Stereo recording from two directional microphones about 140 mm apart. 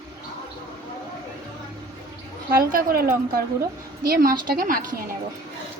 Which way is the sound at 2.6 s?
90° right.